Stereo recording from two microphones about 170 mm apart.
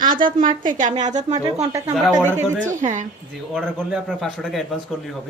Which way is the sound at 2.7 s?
45° right (ahead or behind).